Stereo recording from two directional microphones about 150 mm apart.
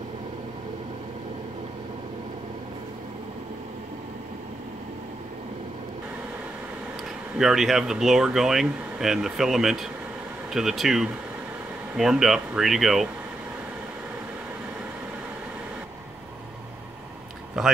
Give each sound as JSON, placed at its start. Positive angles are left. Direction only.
{"t": 7.3, "sound": "speech", "side_deg": 0}
{"t": 17.6, "sound": "speech", "side_deg": -5}